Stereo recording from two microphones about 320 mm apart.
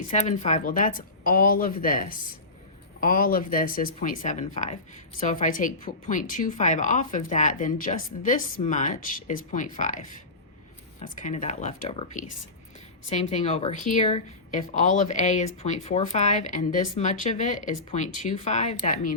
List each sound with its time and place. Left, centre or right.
0.1 s speech: left